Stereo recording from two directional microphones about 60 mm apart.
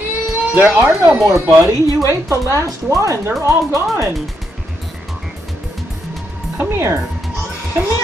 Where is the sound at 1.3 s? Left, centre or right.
Right.